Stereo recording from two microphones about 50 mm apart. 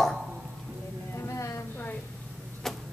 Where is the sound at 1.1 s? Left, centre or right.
Left.